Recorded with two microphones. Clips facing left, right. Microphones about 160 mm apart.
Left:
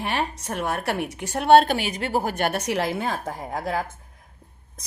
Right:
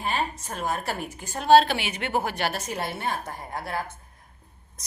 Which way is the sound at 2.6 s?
85° left.